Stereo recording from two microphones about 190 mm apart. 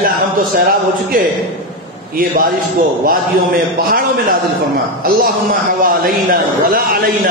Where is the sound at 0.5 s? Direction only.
50° right (ahead or behind).